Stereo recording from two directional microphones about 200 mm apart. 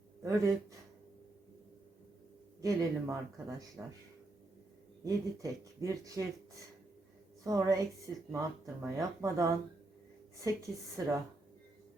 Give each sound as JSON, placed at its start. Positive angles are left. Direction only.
{"t": 0.2, "sound": "speech", "side_deg": -15}
{"t": 2.6, "sound": "speech", "side_deg": -15}
{"t": 5.0, "sound": "speech", "side_deg": -15}
{"t": 7.4, "sound": "speech", "side_deg": -15}
{"t": 10.9, "sound": "speech", "side_deg": -15}